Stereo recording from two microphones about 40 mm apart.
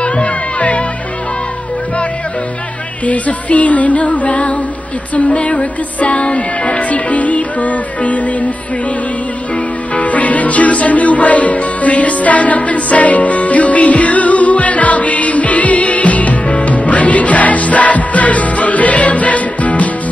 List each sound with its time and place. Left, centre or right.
0.0 s music: left
3.1 s music: left
9.9 s music: left